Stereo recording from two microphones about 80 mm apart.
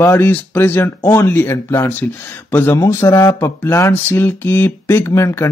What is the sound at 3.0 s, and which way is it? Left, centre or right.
Speech, left.